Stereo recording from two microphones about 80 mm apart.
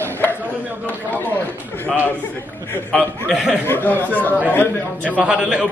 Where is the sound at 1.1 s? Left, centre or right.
Left.